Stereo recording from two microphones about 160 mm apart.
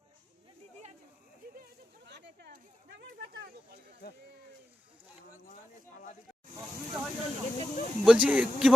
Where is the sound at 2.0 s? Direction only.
90° right.